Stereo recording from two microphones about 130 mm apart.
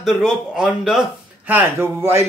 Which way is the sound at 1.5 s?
15° right (ahead or behind).